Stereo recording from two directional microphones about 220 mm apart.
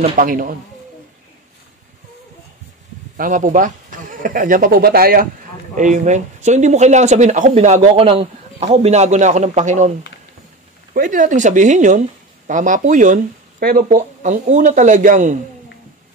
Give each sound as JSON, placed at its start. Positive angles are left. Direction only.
{"t": 0.1, "sound": "speech", "side_deg": -40}
{"t": 3.2, "sound": "speech", "side_deg": -35}